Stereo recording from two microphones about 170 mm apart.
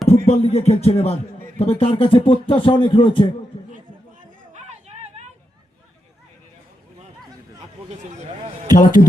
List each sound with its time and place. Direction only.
0.3 s speech: 40° left (ahead or behind)
4.5 s music: 40° right (ahead or behind)
8.7 s a man's voice: 50° left (ahead or behind)